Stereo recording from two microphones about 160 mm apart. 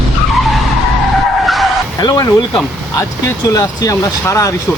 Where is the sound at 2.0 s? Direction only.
20° left (ahead or behind).